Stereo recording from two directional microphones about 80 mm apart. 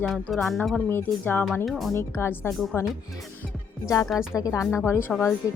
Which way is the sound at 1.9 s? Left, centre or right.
Left.